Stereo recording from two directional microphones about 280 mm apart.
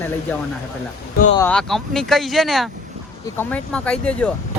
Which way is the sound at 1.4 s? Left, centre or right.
Centre.